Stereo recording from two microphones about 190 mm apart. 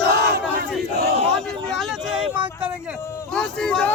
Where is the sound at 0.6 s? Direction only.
55° right (ahead or behind).